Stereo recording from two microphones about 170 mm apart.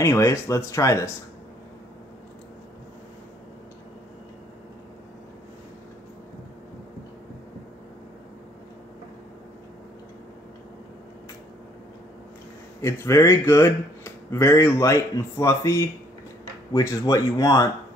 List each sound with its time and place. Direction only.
0.0 s speech: 15° left (ahead or behind)
12.8 s speech: 15° left (ahead or behind)